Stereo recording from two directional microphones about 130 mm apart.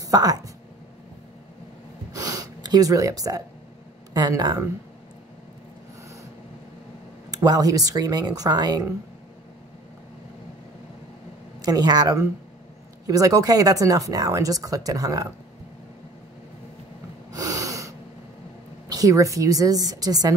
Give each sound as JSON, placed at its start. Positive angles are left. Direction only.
{"t": 0.0, "sound": "speech", "side_deg": -30}
{"t": 2.1, "sound": "gasp", "side_deg": -30}
{"t": 4.1, "sound": "speech", "side_deg": -30}
{"t": 7.2, "sound": "speech", "side_deg": -30}
{"t": 11.6, "sound": "speech", "side_deg": -30}
{"t": 17.3, "sound": "snort", "side_deg": -25}
{"t": 18.9, "sound": "speech", "side_deg": -25}